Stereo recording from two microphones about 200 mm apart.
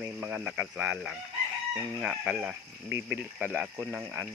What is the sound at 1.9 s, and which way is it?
Speech, centre (ahead or behind).